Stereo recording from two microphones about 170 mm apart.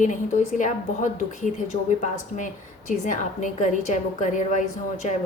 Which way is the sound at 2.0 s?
45° left (ahead or behind).